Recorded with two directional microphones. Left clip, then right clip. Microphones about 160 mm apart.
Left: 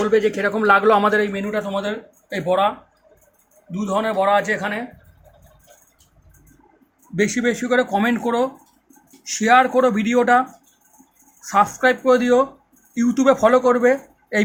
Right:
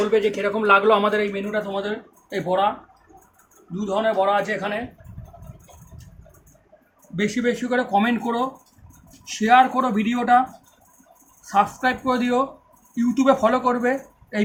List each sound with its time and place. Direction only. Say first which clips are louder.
0.0 s a man's voice: left 2 dB; 30° left (ahead or behind); by 2.6 s 45° left (ahead or behind)
3.8 s a man's voice: left 1 dB; 50° left (ahead or behind)
7.2 s a man's voice: left 3 dB; 35° left (ahead or behind)
11.4 s a man's voice: left 3 dB; 40° left (ahead or behind)